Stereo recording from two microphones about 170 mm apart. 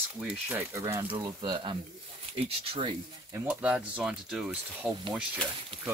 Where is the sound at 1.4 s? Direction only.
30° right (ahead or behind).